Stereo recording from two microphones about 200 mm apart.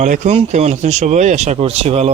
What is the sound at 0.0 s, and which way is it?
Speech, 40° right (ahead or behind).